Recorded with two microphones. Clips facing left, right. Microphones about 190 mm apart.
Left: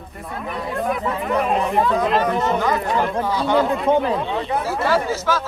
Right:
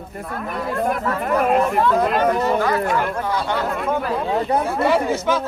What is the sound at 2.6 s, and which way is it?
Speech, 20° left (ahead or behind).